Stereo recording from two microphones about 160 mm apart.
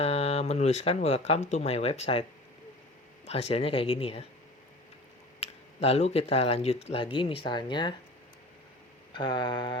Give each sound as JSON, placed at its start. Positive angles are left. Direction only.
{"t": 0.0, "sound": "speech", "side_deg": 40}
{"t": 3.2, "sound": "speech", "side_deg": 40}
{"t": 5.4, "sound": "speech", "side_deg": 40}
{"t": 9.1, "sound": "mantra", "side_deg": 30}